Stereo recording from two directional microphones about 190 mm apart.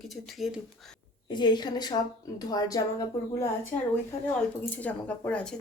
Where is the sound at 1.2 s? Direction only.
25° left (ahead or behind).